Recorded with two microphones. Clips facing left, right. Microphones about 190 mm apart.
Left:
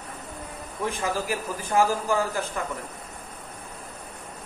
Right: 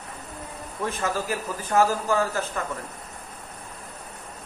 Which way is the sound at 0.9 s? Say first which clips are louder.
Even; 15° left (ahead or behind).